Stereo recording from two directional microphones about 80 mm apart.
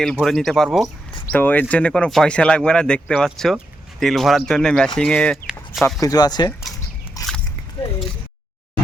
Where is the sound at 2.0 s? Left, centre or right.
Centre.